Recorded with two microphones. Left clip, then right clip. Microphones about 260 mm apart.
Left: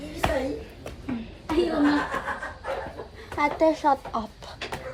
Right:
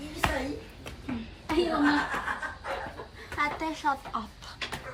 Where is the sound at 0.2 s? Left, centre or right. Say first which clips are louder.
Left 4 dB; centre.